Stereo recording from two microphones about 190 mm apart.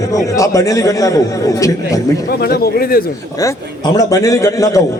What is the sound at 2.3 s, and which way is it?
Speech, 55° left (ahead or behind).